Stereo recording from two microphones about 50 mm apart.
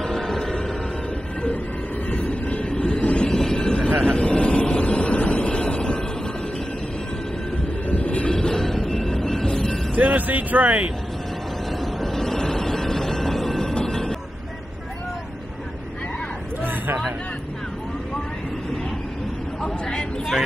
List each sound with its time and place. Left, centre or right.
0.0 s music: centre
2.0 s vehicle: left
3.3 s vehicle: centre
7.9 s train: left
8.3 s train: centre
9.9 s vehicle: right
11.8 s train: centre
19.6 s vehicle: centre